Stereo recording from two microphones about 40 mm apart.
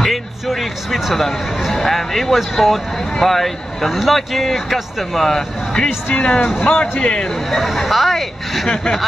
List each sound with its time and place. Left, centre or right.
0.0 s speech: centre
6.0 s a man's voice: left
7.5 s speech: centre